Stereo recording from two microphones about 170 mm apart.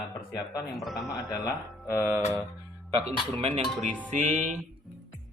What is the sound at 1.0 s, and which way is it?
Speech, 20° left (ahead or behind).